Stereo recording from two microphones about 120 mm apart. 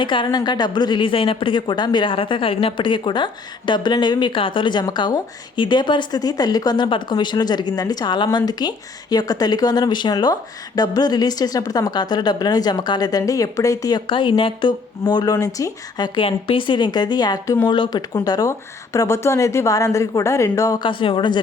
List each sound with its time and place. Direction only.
0.0 s a woman's voice: 40° left (ahead or behind)
14.1 s speech: 45° left (ahead or behind)
16.2 s speech: 45° left (ahead or behind); by 17.7 s 25° left (ahead or behind)
17.7 s speech: 40° left (ahead or behind)
20.8 s speech: 45° left (ahead or behind)